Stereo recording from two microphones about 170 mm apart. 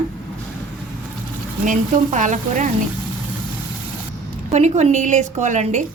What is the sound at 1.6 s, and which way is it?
A woman's voice, 45° right (ahead or behind).